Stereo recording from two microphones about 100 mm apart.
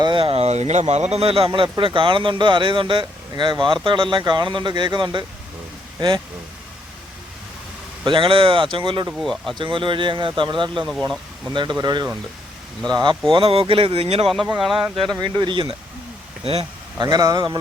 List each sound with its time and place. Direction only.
0.0 s a man's voice: 55° right (ahead or behind)
8.0 s speech: 55° right (ahead or behind)
9.1 s speech: centre (ahead or behind)
9.6 s a man's voice: 55° right (ahead or behind)
13.3 s speech: 65° right (ahead or behind); by 14.3 s 80° right
14.6 s speech: 5° right (ahead or behind)
15.2 s a man's voice: 50° right (ahead or behind)
16.4 s speech: 75° right (ahead or behind)
17.0 s a man's voice: 40° right (ahead or behind)